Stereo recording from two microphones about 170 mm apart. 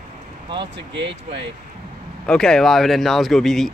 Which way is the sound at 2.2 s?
5° left (ahead or behind).